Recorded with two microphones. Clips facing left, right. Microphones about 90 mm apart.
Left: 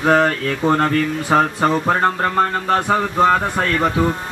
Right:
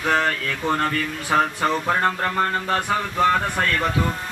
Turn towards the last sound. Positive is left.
turn(degrees=25)  # may be behind; listen again after turning